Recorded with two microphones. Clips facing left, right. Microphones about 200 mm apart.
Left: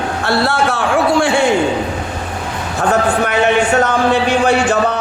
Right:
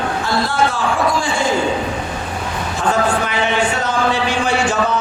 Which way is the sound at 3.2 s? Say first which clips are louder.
Left 5 dB; 65° left (ahead or behind).